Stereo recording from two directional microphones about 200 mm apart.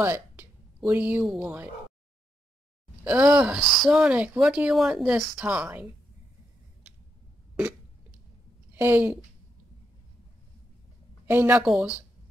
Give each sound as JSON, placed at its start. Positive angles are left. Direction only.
{"t": 0.0, "sound": "speech", "side_deg": -10}
{"t": 3.0, "sound": "a woman's voice", "side_deg": -10}
{"t": 8.7, "sound": "a woman's voice", "side_deg": -10}
{"t": 11.2, "sound": "speech", "side_deg": -10}